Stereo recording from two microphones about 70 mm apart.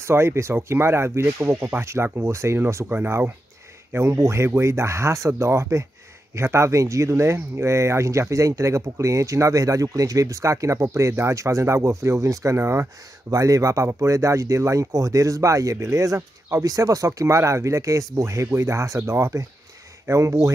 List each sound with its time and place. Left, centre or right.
0.0 s speech: right
12.5 s speech: right
13.3 s speech: right
16.6 s speech: right